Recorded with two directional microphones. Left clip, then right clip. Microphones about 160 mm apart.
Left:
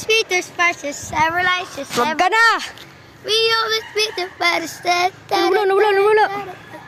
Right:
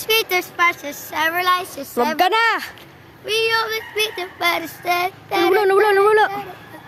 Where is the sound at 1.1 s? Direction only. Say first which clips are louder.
Left 1 dB; 40° right (ahead or behind).